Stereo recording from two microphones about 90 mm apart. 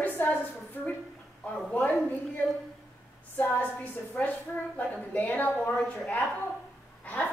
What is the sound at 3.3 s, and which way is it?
A woman's voice, 15° left (ahead or behind).